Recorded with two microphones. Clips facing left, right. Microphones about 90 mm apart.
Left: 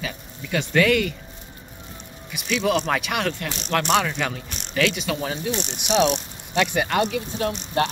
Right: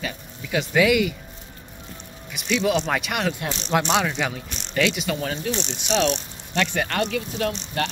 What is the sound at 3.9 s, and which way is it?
Speech, 5° right (ahead or behind).